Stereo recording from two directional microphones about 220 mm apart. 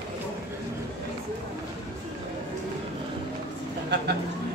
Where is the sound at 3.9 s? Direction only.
50° right (ahead or behind).